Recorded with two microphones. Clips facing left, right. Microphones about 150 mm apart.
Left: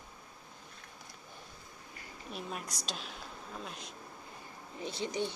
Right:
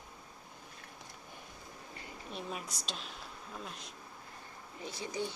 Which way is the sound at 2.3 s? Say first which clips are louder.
Left 1 dB; centre (ahead or behind).